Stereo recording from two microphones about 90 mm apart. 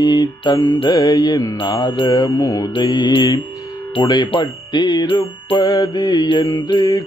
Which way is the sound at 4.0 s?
55° left (ahead or behind).